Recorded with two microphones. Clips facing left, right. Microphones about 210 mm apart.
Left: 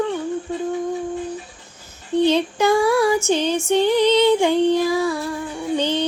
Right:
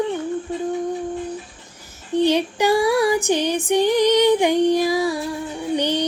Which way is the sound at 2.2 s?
15° right (ahead or behind).